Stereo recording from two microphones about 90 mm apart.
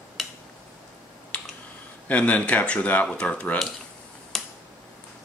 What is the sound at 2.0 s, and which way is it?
Speech, 15° left (ahead or behind).